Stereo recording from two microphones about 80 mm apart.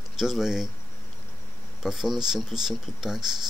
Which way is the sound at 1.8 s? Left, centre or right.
Centre.